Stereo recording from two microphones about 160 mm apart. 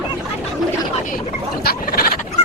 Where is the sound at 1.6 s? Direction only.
70° left (ahead or behind).